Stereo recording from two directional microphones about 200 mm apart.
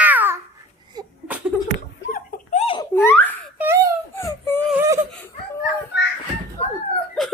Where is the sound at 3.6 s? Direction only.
10° right (ahead or behind).